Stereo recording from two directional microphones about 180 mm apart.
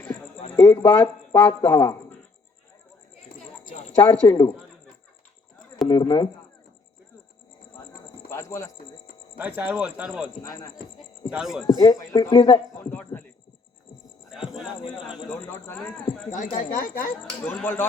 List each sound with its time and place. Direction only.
0.6 s speech: 25° left (ahead or behind)
3.7 s speech: 35° left (ahead or behind)
5.9 s speech: 25° left (ahead or behind)
8.3 s speech: 15° left (ahead or behind)
9.4 s speech: 10° right (ahead or behind)
10.3 s speech: 20° left (ahead or behind)
11.3 s speech: 5° right (ahead or behind)
11.6 s speech: 20° left (ahead or behind)
12.8 s speech: 10° left (ahead or behind)
14.3 s speech: 5° right (ahead or behind)
15.3 s speech: 10° left (ahead or behind)
16.3 s speech: 45° left (ahead or behind)
17.4 s speech: 10° left (ahead or behind)